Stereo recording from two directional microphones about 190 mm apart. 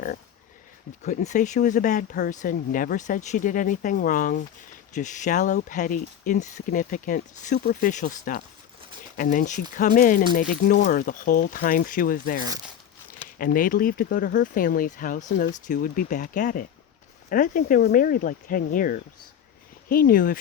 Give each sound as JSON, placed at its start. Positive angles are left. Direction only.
{"t": 1.0, "sound": "speech", "side_deg": 40}